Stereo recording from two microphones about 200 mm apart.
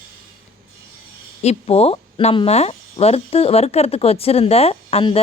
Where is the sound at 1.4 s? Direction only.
30° left (ahead or behind).